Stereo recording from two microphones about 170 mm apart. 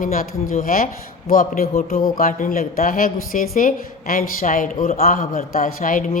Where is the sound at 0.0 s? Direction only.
55° left (ahead or behind).